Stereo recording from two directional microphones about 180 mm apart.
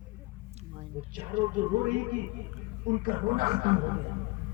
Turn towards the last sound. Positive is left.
turn(degrees=-50)  # may be behind; listen again after turning